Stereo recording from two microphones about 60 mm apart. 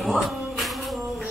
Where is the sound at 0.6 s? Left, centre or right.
Centre.